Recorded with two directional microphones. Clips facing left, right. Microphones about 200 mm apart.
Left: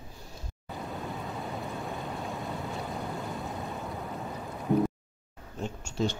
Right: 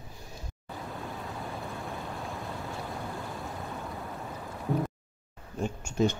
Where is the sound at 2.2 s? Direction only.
Centre (ahead or behind).